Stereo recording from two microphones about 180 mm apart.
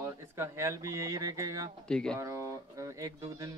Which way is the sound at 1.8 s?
5° left (ahead or behind).